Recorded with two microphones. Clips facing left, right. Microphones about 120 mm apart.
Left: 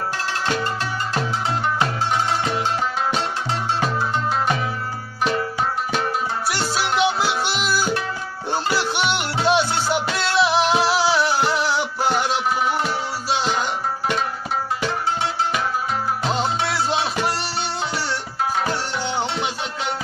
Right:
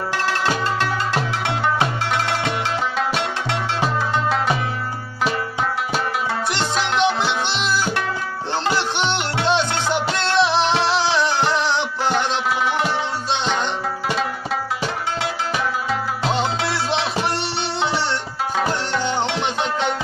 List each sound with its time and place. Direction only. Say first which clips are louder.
2.0 s music: even; 90° right
6.5 s music: left 1 dB; 5° left (ahead or behind)
9.5 s music: left 1 dB; 10° left (ahead or behind)
16.3 s music: even; centre (ahead or behind)